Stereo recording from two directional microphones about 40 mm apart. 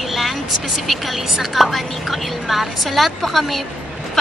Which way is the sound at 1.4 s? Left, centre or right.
Centre.